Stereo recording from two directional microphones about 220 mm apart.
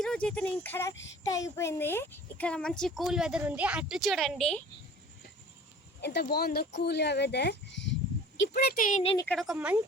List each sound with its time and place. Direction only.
0.0 s speech: 5° left (ahead or behind)
6.0 s speech: 50° left (ahead or behind); by 9.1 s 35° left (ahead or behind)
9.1 s speech: 5° left (ahead or behind)